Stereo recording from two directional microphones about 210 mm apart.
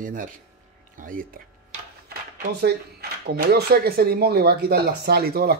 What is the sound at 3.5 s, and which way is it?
Speech, 50° right (ahead or behind).